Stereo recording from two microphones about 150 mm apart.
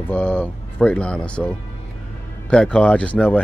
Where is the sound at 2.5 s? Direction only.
5° left (ahead or behind).